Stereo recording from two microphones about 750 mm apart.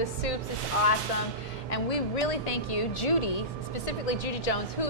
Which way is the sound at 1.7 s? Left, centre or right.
Left.